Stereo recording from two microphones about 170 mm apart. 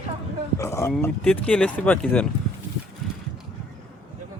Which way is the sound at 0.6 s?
15° left (ahead or behind).